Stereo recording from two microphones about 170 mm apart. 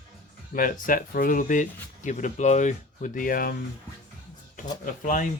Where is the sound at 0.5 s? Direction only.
55° left (ahead or behind).